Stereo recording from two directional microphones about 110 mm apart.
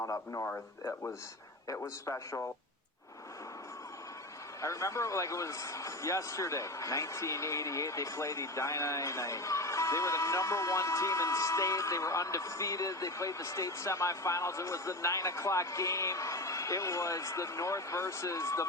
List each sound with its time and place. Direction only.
0.0 s a man's voice: 25° left (ahead or behind)
4.6 s a man's voice: 25° left (ahead or behind)